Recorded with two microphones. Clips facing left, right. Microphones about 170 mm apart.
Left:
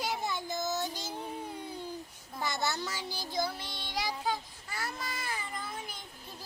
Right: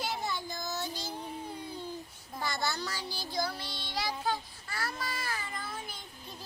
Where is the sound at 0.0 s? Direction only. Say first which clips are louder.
Left 1 dB; 15° left (ahead or behind).